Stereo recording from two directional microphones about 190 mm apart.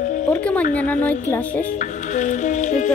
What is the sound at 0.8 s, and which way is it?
Speech, 10° left (ahead or behind).